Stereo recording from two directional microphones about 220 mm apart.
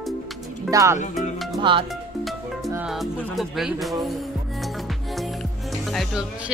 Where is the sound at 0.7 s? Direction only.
15° right (ahead or behind).